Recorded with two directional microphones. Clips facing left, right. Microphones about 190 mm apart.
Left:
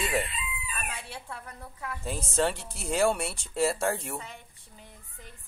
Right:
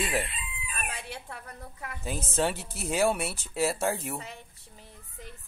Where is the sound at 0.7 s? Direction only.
40° right (ahead or behind).